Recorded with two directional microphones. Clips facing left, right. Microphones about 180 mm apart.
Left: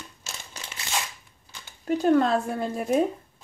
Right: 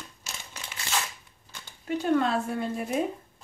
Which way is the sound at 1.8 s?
40° left (ahead or behind).